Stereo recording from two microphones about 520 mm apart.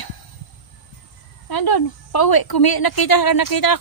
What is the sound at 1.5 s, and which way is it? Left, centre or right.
A woman's voice, left.